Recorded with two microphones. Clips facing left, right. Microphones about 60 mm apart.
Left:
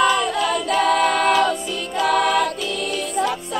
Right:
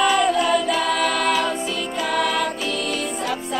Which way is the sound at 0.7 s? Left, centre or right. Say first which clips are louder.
Left 3 dB; left.